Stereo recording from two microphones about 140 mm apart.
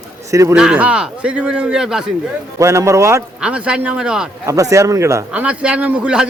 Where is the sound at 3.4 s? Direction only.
5° right (ahead or behind).